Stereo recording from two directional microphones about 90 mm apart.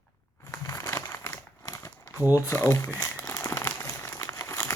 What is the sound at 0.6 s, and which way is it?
Crumpling, 40° left (ahead or behind).